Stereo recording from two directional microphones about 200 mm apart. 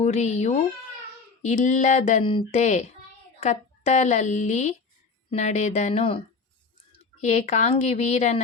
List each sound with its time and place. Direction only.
0.0 s speech: 35° left (ahead or behind)